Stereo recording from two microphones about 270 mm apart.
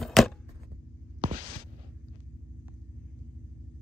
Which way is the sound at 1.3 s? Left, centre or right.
Right.